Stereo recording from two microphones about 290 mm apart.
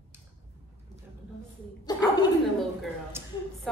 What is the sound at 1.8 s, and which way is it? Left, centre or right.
Speech, centre.